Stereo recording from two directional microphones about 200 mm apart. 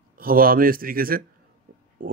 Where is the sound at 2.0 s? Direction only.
45° right (ahead or behind).